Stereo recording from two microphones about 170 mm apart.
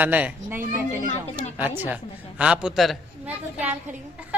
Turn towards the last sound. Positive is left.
turn(degrees=-10)  # may be behind; listen again after turning